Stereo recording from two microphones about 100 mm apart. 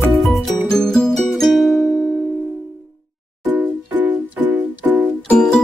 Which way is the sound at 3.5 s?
20° right (ahead or behind).